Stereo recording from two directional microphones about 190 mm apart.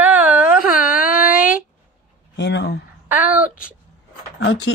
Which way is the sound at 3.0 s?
10° right (ahead or behind).